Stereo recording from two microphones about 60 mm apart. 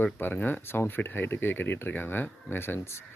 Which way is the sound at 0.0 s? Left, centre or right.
Left.